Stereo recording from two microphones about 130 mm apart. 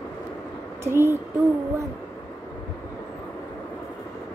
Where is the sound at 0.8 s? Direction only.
20° right (ahead or behind).